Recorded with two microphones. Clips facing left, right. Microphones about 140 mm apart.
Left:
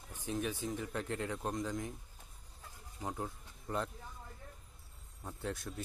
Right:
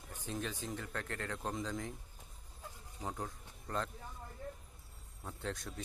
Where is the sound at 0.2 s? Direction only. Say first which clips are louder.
Left 4 dB; 10° left (ahead or behind).